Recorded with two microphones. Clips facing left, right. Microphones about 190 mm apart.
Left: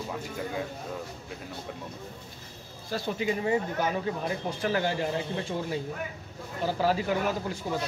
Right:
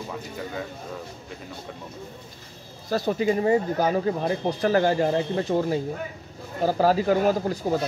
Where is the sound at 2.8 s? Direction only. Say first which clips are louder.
Right 7 dB; 40° right (ahead or behind).